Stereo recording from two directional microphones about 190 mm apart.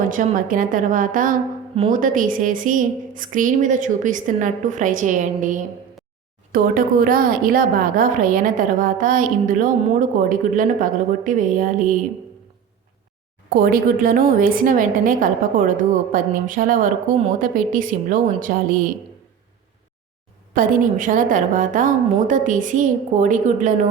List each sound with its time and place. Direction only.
0.1 s a woman's voice: 45° right (ahead or behind)
13.6 s a woman's voice: 50° right (ahead or behind)
20.6 s a woman's voice: 45° right (ahead or behind)